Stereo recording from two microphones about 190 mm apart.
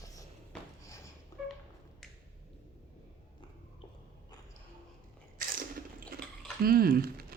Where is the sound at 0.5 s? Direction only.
5° left (ahead or behind).